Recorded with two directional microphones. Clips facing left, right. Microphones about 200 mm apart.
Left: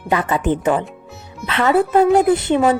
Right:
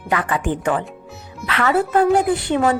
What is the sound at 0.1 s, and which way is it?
A woman's voice, 25° left (ahead or behind).